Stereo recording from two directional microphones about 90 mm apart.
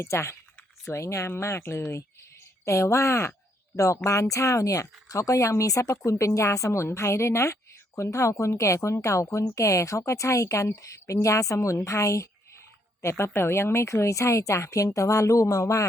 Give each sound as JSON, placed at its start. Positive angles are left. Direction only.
{"t": 0.0, "sound": "a woman's voice", "side_deg": 30}